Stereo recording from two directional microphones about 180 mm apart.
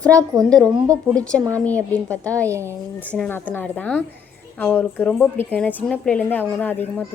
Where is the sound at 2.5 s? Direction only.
15° right (ahead or behind).